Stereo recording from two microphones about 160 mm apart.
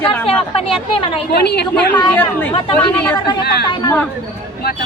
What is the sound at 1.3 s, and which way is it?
Speech, 90° left.